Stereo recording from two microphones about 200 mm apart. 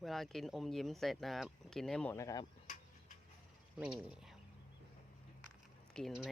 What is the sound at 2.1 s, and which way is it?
Speech, 15° left (ahead or behind).